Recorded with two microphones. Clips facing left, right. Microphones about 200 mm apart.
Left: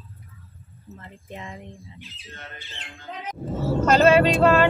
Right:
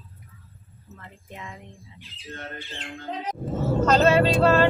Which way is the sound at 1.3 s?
25° left (ahead or behind).